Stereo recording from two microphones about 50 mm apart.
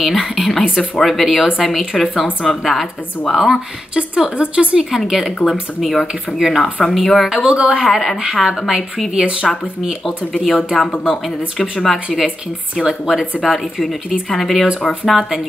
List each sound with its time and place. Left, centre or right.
0.0 s a woman's voice: centre
0.4 s speech: centre
3.9 s a woman's voice: centre
4.9 s speech: centre
7.2 s speech: centre
8.5 s a woman's voice: centre
10.4 s speech: centre
11.8 s a woman's voice: centre
13.4 s speech: centre